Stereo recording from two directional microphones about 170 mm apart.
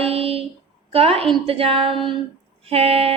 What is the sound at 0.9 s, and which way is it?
Speech, 35° right (ahead or behind).